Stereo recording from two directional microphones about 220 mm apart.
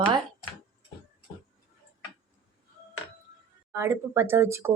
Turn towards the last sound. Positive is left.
turn(degrees=-10)  # may be behind; listen again after turning